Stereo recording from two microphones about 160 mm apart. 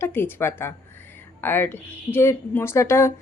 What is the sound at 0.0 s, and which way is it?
A woman's voice, 15° left (ahead or behind).